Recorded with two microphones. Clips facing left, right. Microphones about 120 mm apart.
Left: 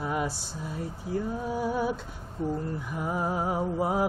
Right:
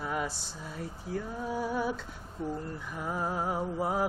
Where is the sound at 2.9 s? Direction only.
10° left (ahead or behind).